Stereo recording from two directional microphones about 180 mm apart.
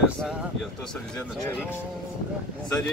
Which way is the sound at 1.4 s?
10° left (ahead or behind).